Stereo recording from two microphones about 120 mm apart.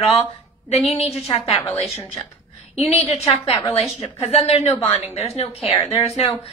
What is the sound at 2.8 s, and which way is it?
A woman's voice, 60° left (ahead or behind).